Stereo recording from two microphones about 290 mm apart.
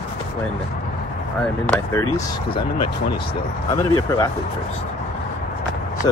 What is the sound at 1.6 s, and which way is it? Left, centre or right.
Speech, centre.